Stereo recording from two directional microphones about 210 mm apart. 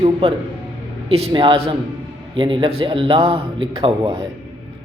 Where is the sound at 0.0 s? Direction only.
25° right (ahead or behind).